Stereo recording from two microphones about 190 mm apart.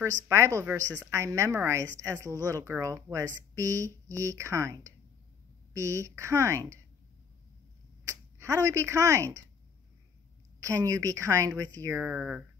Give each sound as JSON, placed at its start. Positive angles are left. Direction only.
{"t": 0.3, "sound": "a woman's voice", "side_deg": -15}
{"t": 8.1, "sound": "speech", "side_deg": -15}
{"t": 10.6, "sound": "a woman's voice", "side_deg": -15}